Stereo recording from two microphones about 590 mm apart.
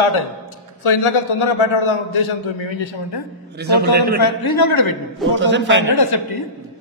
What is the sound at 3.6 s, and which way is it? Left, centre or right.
Speech, centre.